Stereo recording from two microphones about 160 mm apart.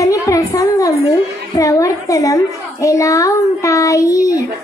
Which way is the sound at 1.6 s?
20° left (ahead or behind).